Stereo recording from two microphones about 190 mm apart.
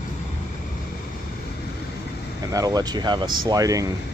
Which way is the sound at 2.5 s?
20° right (ahead or behind).